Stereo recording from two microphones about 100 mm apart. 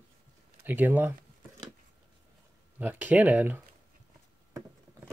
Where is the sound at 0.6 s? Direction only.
20° right (ahead or behind).